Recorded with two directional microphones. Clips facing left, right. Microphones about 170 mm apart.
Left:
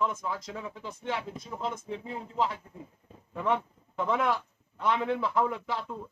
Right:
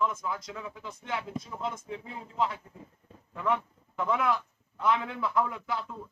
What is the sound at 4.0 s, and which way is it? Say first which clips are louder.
Speech: even; 30° left (ahead or behind).